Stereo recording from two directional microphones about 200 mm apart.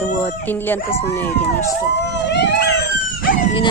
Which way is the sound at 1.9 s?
60° left (ahead or behind).